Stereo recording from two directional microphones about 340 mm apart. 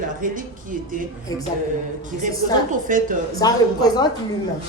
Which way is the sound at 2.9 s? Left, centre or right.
Right.